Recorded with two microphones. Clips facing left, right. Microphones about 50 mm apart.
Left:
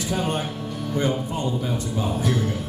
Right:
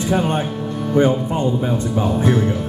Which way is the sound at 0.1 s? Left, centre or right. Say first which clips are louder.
Right 6 dB; right.